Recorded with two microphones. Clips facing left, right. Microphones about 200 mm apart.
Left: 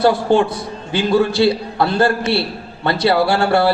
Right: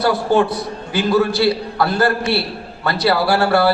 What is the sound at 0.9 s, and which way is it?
A man's voice, 25° left (ahead or behind).